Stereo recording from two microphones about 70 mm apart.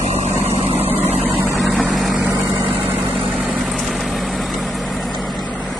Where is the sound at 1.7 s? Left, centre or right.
Centre.